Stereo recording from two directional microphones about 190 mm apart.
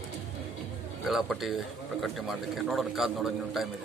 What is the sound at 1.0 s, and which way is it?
A man's voice, centre (ahead or behind).